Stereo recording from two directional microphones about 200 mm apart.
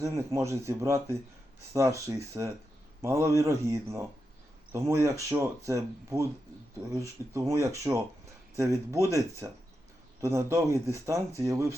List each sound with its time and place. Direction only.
0.0 s speech: 15° right (ahead or behind)